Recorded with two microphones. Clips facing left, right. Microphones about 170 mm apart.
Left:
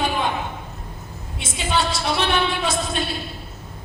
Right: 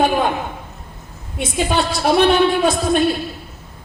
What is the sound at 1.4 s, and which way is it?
A woman's voice, 55° right (ahead or behind).